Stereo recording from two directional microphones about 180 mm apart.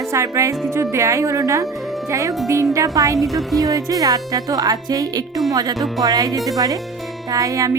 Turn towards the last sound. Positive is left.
turn(degrees=-20)  # may be behind; listen again after turning